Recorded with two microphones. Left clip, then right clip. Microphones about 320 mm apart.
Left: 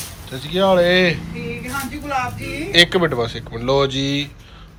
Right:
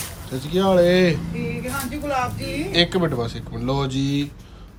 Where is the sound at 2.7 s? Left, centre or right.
Centre.